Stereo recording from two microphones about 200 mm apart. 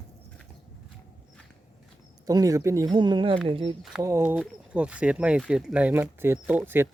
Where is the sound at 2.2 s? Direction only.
15° right (ahead or behind).